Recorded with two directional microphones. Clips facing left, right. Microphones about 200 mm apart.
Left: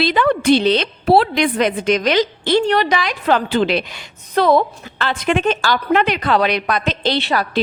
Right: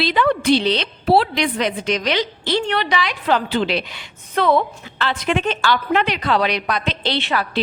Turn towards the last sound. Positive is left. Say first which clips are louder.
# left 3 dB
turn(degrees=40)  # may be behind; listen again after turning